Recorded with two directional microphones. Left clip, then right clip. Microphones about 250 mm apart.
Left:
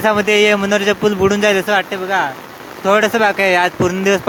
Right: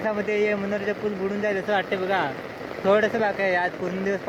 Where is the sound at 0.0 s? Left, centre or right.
Left.